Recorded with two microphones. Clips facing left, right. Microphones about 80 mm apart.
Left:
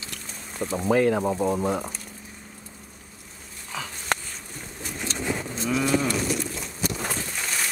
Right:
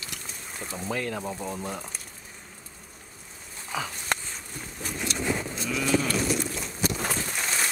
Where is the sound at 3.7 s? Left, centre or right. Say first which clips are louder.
Right 3 dB; centre.